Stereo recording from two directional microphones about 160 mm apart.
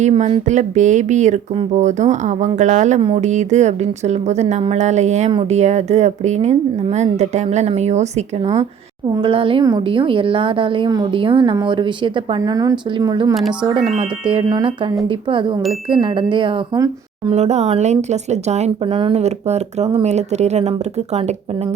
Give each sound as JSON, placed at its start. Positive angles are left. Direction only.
{"t": 0.0, "sound": "a woman's voice", "side_deg": -40}
{"t": 9.1, "sound": "a woman's voice", "side_deg": -35}
{"t": 17.3, "sound": "a woman's voice", "side_deg": -45}